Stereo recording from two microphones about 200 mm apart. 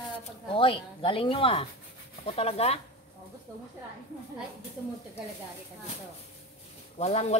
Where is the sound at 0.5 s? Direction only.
25° left (ahead or behind).